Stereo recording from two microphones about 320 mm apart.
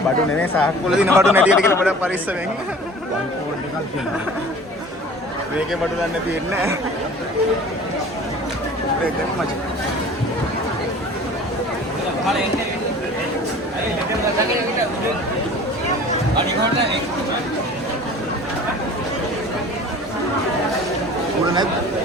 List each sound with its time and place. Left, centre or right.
0.3 s speech: centre